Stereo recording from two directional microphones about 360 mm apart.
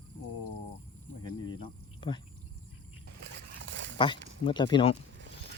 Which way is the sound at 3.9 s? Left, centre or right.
Centre.